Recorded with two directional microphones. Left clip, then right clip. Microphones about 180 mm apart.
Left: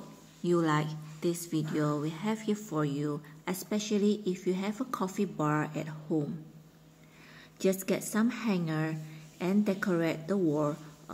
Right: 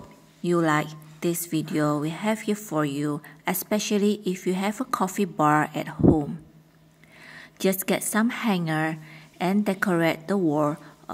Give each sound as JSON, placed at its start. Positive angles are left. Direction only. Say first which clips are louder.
{"t": 0.4, "sound": "a woman's voice", "louder": "right 6 dB", "side_deg": -35}
{"t": 7.3, "sound": "a woman's voice", "louder": "right 5 dB", "side_deg": -35}